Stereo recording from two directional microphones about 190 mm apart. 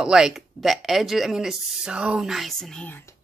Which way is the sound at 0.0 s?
5° right (ahead or behind).